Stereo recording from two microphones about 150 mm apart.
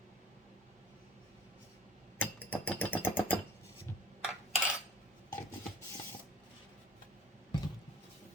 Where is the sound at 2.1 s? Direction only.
10° left (ahead or behind).